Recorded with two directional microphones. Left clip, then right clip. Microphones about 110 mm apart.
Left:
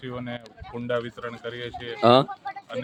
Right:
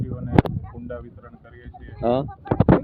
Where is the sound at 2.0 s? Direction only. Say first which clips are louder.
Left 5 dB; 20° left (ahead or behind).